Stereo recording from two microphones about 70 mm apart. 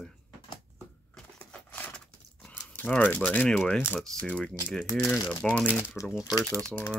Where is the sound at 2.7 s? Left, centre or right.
Left.